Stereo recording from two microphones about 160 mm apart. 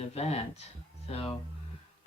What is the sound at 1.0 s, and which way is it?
Speech, 35° left (ahead or behind).